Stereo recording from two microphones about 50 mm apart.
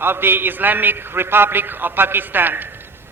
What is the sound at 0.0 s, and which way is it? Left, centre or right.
A man's voice, right.